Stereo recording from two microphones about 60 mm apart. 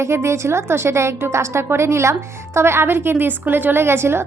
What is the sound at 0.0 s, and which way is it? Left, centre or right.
A woman's voice, right.